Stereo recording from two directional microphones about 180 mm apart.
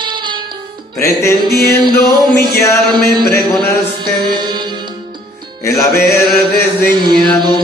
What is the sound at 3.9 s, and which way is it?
Music, 25° right (ahead or behind).